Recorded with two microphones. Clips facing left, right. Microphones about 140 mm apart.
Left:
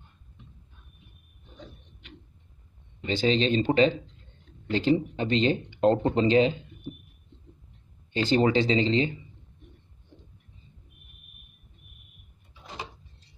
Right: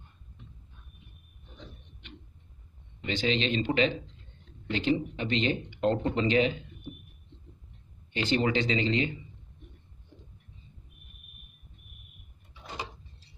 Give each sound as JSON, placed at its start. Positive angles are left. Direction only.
{"t": 3.1, "sound": "speech", "side_deg": 35}
{"t": 8.1, "sound": "speech", "side_deg": 35}